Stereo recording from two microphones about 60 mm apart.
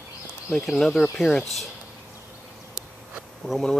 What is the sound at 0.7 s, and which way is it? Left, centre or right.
Speech, centre.